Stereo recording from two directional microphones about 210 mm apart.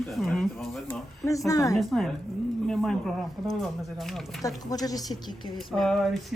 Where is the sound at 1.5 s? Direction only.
15° left (ahead or behind).